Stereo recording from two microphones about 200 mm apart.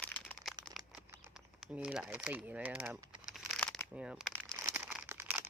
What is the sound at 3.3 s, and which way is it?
Crumpling, centre (ahead or behind).